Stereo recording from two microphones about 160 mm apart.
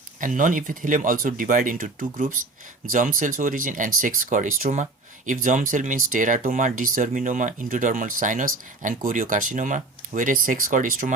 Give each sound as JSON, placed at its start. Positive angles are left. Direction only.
{"t": 0.2, "sound": "speech", "side_deg": -55}